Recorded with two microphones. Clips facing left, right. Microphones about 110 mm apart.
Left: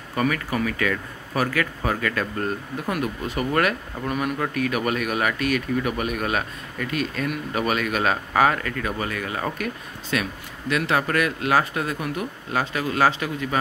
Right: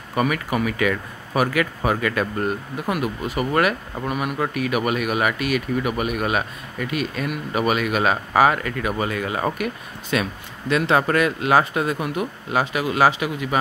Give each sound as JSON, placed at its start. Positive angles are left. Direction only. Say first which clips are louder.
{"t": 0.1, "sound": "speech", "louder": "right 2 dB", "side_deg": -15}